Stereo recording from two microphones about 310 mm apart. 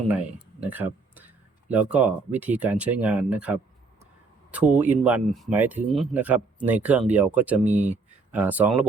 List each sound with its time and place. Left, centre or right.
0.6 s speech: centre
7.6 s speech: right
8.3 s speech: centre